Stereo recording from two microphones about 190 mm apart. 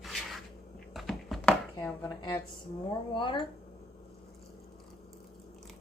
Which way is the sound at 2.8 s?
25° left (ahead or behind).